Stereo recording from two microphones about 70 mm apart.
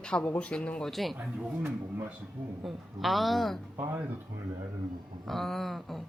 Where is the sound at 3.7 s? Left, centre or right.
Right.